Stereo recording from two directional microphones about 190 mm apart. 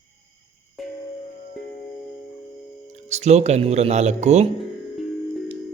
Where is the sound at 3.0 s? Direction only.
35° right (ahead or behind).